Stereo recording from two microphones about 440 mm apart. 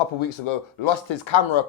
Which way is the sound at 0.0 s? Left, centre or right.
Left.